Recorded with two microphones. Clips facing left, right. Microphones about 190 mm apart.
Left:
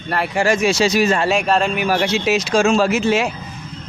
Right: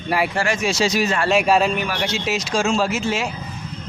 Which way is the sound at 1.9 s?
60° left (ahead or behind).